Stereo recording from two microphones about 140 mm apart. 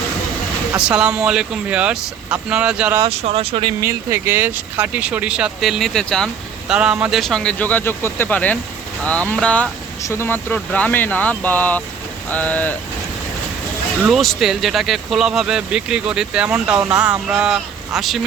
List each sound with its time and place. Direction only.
0.9 s speech: 5° right (ahead or behind)
3.1 s speech: 50° right (ahead or behind)
3.8 s speech: 20° right (ahead or behind); by 6.7 s 5° left (ahead or behind)
6.7 s speech: 5° right (ahead or behind); by 9.6 s 10° left (ahead or behind)
10.0 s speech: 20° left (ahead or behind)
14.0 s speech: centre (ahead or behind)